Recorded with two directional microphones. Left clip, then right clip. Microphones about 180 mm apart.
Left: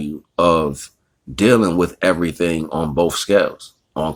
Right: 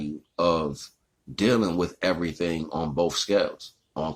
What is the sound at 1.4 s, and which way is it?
Speech, 40° left (ahead or behind).